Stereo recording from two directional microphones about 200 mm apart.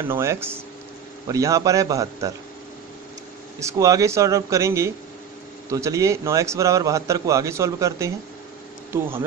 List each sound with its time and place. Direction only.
0.0 s a man's voice: 10° right (ahead or behind)
3.5 s a man's voice: 15° right (ahead or behind)